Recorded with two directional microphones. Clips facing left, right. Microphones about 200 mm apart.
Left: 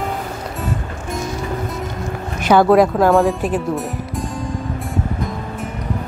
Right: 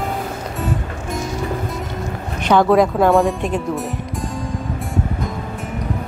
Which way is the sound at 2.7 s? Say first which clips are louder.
Left 1 dB; centre (ahead or behind).